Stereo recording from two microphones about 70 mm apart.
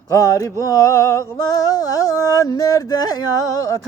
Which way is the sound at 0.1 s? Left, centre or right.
Left.